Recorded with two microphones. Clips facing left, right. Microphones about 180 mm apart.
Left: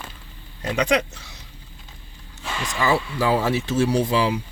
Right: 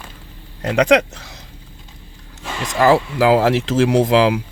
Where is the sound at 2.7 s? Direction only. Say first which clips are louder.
Right 8 dB; 90° right.